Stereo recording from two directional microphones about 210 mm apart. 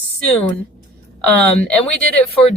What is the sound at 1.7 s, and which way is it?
Speech, 5° left (ahead or behind).